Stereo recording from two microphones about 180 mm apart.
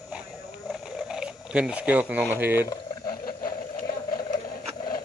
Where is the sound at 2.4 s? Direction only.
10° right (ahead or behind).